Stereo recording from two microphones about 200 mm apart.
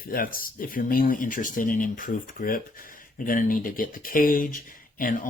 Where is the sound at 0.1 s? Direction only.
45° left (ahead or behind).